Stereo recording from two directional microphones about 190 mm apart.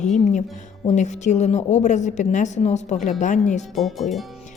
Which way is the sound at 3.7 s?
Centre (ahead or behind).